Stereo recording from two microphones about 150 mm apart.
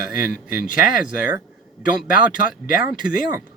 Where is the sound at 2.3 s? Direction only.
65° left (ahead or behind).